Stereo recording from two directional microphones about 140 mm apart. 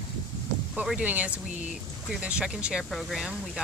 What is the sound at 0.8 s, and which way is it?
Speech, 10° right (ahead or behind).